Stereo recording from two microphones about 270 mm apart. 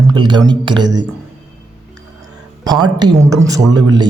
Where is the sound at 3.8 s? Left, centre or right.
Centre.